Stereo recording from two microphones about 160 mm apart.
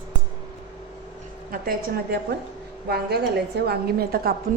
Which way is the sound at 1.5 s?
65° right (ahead or behind).